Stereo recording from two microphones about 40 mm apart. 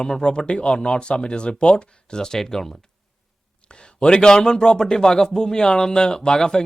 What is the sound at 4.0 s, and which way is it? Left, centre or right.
A man's voice, left.